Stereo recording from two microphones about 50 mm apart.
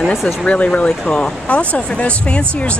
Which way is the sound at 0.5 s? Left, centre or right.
Left.